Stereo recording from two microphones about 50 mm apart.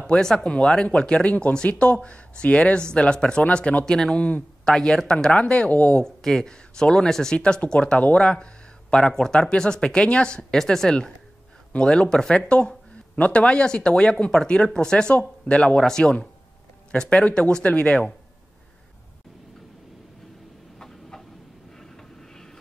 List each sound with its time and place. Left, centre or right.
0.0 s speech: centre
3.8 s speech: centre; by 6.0 s left
6.0 s speech: centre
8.9 s speech: centre
10.6 s speech: centre
17.6 s speech: left
20.8 s a sound: centre
21.7 s vehicle: centre